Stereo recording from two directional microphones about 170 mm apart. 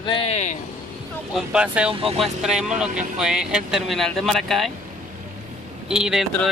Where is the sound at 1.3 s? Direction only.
5° right (ahead or behind).